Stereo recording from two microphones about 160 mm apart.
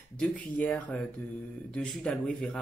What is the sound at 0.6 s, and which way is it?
Speech, 5° left (ahead or behind).